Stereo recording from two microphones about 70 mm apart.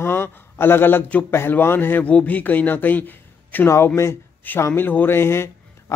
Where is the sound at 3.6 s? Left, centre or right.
Left.